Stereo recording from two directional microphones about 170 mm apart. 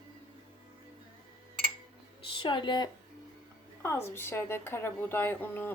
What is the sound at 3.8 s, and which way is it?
A woman's voice, 15° left (ahead or behind).